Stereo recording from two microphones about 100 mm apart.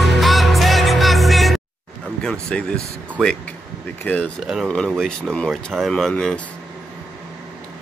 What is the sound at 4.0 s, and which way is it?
Speech, 15° left (ahead or behind).